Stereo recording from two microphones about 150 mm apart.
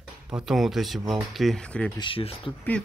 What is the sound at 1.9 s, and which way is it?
Speech, 35° left (ahead or behind).